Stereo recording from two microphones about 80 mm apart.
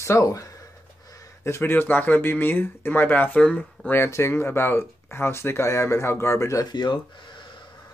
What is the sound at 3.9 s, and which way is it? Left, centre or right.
Speech, left.